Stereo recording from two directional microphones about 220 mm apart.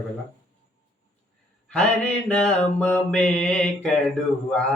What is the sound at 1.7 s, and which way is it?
Mantra, 5° left (ahead or behind).